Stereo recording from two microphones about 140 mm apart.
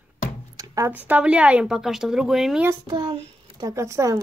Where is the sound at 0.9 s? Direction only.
10° right (ahead or behind).